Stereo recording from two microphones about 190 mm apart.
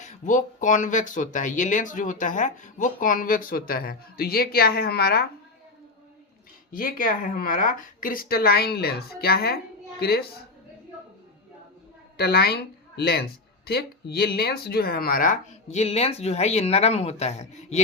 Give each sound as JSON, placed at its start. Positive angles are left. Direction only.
{"t": 0.0, "sound": "speech", "side_deg": 40}
{"t": 6.7, "sound": "speech", "side_deg": 50}
{"t": 12.1, "sound": "a woman's voice", "side_deg": 55}